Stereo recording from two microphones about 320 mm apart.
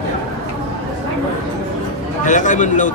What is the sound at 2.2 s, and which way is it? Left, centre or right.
Speech, left.